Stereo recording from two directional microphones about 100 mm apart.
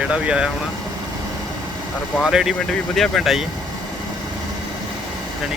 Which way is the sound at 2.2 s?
5° right (ahead or behind).